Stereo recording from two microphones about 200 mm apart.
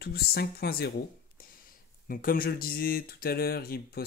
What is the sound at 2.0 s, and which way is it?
Speech, 45° left (ahead or behind).